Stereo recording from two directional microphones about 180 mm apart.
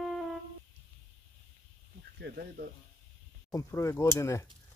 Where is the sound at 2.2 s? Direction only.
55° right (ahead or behind).